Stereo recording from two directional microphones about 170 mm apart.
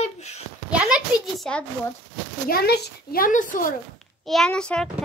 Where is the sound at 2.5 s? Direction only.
70° left (ahead or behind); by 3.7 s 50° left (ahead or behind).